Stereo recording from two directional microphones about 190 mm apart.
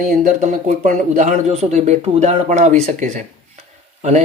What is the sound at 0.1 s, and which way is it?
Speech, 45° right (ahead or behind).